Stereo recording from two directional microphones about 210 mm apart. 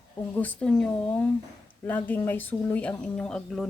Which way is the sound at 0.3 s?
5° left (ahead or behind).